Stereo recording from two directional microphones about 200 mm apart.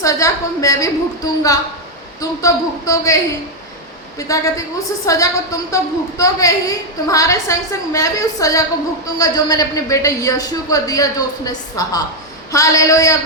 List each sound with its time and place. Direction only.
0.0 s a woman's voice: 15° left (ahead or behind)
4.3 s a woman's voice: 15° left (ahead or behind)